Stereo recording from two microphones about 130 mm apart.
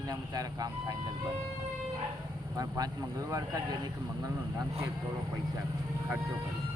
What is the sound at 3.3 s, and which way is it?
Speech, 25° right (ahead or behind).